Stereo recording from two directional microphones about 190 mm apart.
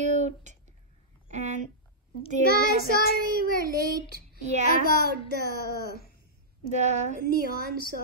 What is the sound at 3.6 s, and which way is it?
A woman's voice, 55° right (ahead or behind).